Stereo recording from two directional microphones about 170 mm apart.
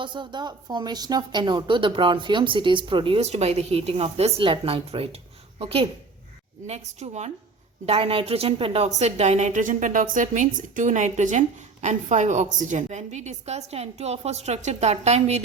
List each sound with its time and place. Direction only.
0.0 s a woman's voice: 25° right (ahead or behind)